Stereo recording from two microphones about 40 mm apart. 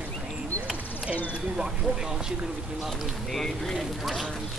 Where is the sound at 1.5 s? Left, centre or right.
Centre.